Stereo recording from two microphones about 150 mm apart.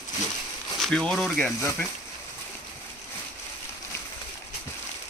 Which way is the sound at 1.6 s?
15° left (ahead or behind).